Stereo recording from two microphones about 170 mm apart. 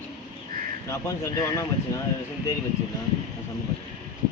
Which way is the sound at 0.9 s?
15° left (ahead or behind).